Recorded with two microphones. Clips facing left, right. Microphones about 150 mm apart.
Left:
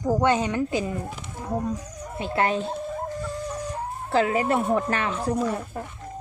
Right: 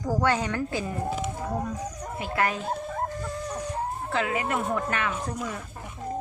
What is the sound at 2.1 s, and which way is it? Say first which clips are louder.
Speech: left 4 dB; 30° left (ahead or behind).